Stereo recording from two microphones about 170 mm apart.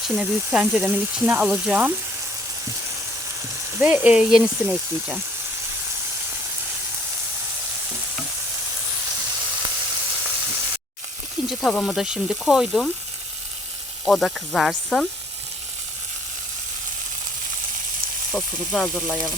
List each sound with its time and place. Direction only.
0.2 s speech: 5° right (ahead or behind)
3.8 s speech: 10° right (ahead or behind)
11.4 s speech: centre (ahead or behind)
14.0 s speech: centre (ahead or behind)
18.3 s speech: 5° left (ahead or behind)